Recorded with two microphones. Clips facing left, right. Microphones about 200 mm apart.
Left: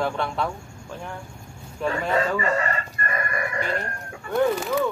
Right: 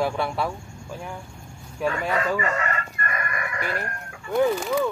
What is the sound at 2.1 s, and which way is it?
Chicken, 30° left (ahead or behind).